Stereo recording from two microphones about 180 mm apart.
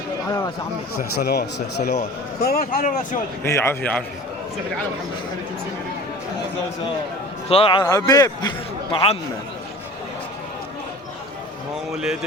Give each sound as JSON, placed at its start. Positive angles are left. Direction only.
{"t": 1.2, "sound": "speech", "side_deg": 60}
{"t": 2.4, "sound": "speech", "side_deg": 55}
{"t": 3.4, "sound": "a man's voice", "side_deg": 15}
{"t": 7.4, "sound": "a man's voice", "side_deg": 35}
{"t": 11.9, "sound": "speech", "side_deg": 0}